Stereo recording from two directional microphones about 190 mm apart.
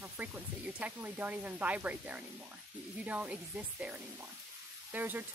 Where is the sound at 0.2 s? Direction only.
10° right (ahead or behind).